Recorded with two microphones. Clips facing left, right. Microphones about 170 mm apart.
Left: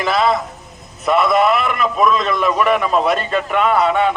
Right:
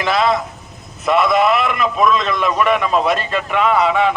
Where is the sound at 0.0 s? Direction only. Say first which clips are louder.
Even; centre (ahead or behind).